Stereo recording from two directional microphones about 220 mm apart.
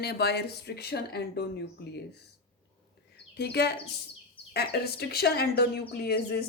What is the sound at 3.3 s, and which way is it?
Speech, 50° left (ahead or behind).